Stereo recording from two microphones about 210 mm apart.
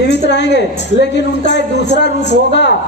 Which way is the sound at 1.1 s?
55° left (ahead or behind).